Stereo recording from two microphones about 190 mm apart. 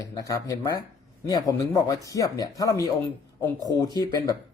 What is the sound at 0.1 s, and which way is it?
Speech, 15° left (ahead or behind).